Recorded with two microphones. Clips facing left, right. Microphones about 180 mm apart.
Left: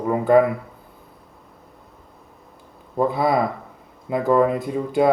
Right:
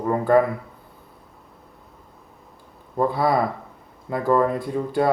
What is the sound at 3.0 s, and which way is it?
Speech, 20° left (ahead or behind).